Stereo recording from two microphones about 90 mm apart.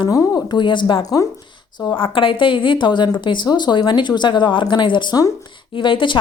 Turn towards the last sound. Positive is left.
turn(degrees=65)  # may be behind; listen again after turning